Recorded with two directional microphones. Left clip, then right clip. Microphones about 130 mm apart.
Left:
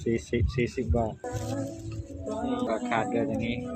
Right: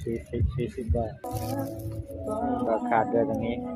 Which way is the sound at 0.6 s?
90° left.